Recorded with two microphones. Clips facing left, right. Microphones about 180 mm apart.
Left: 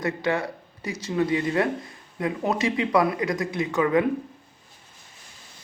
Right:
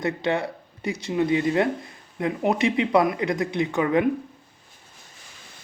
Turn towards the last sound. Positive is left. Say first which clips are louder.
# right 1 dB
turn(degrees=-20)  # may be behind; listen again after turning